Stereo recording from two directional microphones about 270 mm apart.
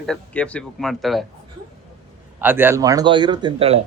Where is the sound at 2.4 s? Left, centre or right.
Centre.